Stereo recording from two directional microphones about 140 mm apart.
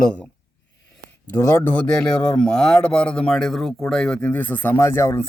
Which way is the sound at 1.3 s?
20° left (ahead or behind).